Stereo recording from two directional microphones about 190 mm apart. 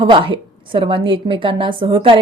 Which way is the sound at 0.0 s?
25° right (ahead or behind).